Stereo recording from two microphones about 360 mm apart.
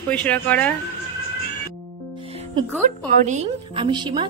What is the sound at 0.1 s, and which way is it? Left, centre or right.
Speech, centre.